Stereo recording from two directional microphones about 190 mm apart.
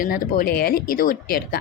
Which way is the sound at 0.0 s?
50° left (ahead or behind).